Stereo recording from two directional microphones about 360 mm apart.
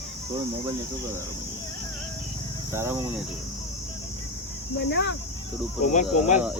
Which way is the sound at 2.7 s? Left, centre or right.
Centre.